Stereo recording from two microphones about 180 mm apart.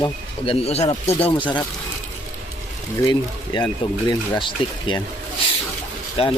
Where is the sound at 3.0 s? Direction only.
25° left (ahead or behind).